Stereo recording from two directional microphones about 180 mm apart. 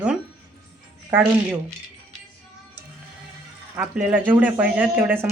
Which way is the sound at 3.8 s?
10° right (ahead or behind).